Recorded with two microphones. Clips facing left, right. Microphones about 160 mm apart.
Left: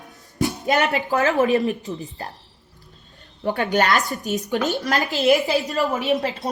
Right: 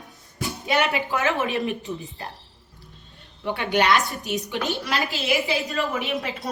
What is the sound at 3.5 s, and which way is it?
A woman's voice, 45° left (ahead or behind).